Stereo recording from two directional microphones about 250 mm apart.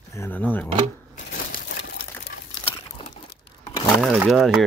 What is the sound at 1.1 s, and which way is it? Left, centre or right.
Crumpling, left.